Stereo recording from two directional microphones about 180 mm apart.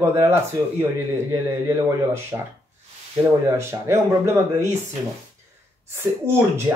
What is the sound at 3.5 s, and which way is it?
Speech, 15° right (ahead or behind).